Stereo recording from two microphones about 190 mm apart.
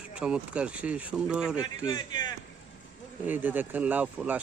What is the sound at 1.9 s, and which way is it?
Speech, 20° left (ahead or behind).